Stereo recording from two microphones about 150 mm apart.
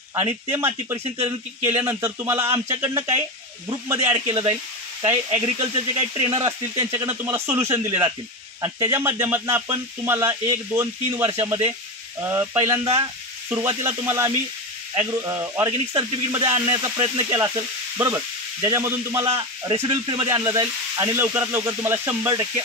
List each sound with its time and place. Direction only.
0.1 s a man's voice: 15° right (ahead or behind)
3.6 s sizzle: 20° right (ahead or behind)
4.3 s speech: 40° right (ahead or behind)
5.0 s a man's voice: 15° right (ahead or behind)
5.9 s speech: 40° right (ahead or behind)
6.3 s sizzle: 20° right (ahead or behind)
8.5 s a man's voice: 25° right (ahead or behind)
15.0 s sizzle: 20° right (ahead or behind)
17.9 s a man's voice: 20° right (ahead or behind)
19.7 s sizzle: 30° right (ahead or behind)